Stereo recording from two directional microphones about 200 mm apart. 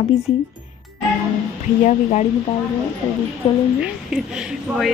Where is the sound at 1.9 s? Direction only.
35° left (ahead or behind).